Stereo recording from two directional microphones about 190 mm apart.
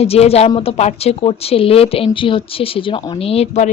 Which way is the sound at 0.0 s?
30° left (ahead or behind).